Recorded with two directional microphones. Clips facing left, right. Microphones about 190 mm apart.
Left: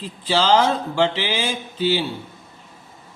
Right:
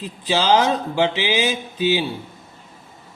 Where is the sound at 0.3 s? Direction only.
10° right (ahead or behind).